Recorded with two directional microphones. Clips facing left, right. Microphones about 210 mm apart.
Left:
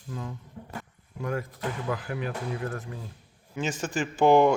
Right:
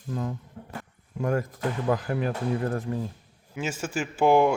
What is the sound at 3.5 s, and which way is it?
A man's voice, 5° right (ahead or behind).